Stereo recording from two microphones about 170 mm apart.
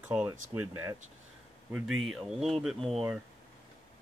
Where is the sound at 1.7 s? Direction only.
Centre (ahead or behind).